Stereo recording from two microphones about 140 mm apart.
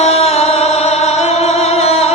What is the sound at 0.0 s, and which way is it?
Music, 50° left (ahead or behind).